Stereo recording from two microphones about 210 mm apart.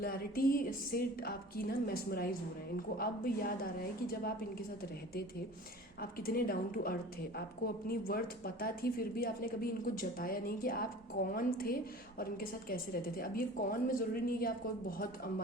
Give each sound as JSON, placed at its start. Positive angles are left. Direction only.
{"t": 0.0, "sound": "speech", "side_deg": 45}
{"t": 6.0, "sound": "speech", "side_deg": 45}